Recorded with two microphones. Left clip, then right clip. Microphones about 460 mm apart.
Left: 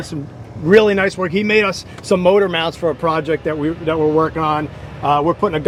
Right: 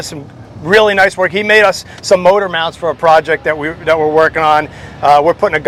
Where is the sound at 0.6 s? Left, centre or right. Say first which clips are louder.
Right 4 dB; right.